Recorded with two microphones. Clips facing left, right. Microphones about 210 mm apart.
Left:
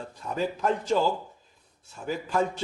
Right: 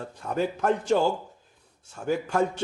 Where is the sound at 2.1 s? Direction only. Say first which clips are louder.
Right 3 dB; 65° right (ahead or behind).